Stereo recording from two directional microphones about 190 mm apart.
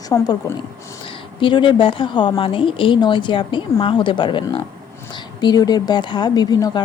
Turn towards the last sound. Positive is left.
turn(degrees=20)  # may be behind; listen again after turning